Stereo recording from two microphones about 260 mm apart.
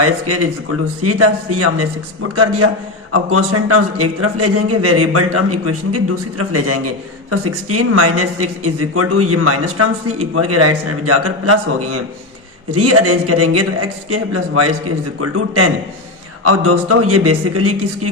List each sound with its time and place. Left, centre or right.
0.0 s a man's voice: right